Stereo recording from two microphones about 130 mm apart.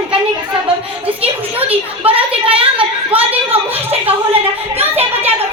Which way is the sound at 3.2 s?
10° right (ahead or behind).